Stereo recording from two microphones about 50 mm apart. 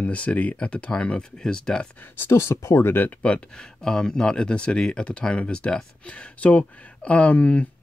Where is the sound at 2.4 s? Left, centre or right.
Left.